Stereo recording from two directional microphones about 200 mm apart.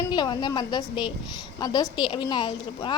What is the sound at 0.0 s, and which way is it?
A woman's voice, 20° left (ahead or behind).